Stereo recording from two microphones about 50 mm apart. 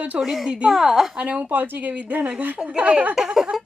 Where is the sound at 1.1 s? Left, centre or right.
Right.